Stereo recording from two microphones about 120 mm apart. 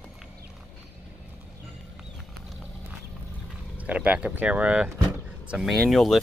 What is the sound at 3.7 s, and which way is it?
Speech, 10° right (ahead or behind).